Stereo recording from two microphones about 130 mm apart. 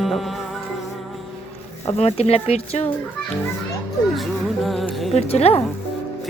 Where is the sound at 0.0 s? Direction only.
Centre (ahead or behind).